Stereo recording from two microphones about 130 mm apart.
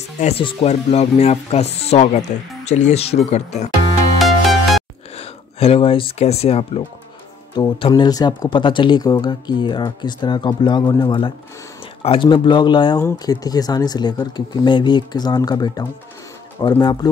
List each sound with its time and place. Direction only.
0.4 s speech: 50° left (ahead or behind)
4.2 s music: centre (ahead or behind)
5.1 s speech: 50° left (ahead or behind)
7.5 s speech: 35° left (ahead or behind)